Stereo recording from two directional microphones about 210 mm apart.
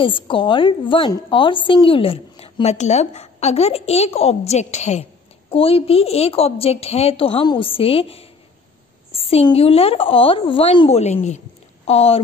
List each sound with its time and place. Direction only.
0.0 s a woman's voice: 25° left (ahead or behind)